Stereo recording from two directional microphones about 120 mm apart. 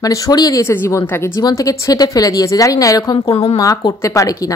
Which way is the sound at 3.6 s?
30° left (ahead or behind).